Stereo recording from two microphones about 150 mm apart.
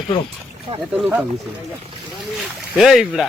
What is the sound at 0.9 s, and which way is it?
Speech, 10° right (ahead or behind).